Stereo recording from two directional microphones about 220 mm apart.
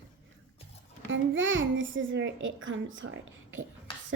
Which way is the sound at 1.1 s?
60° right (ahead or behind).